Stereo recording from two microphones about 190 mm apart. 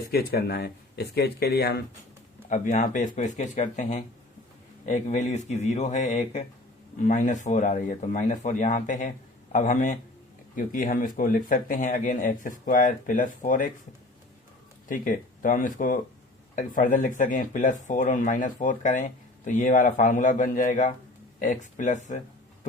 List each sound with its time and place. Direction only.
0.1 s speech: 55° left (ahead or behind)
2.5 s speech: 40° left (ahead or behind)
14.8 s speech: 45° left (ahead or behind)